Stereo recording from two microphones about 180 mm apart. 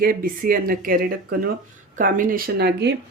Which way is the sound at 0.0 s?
55° right (ahead or behind).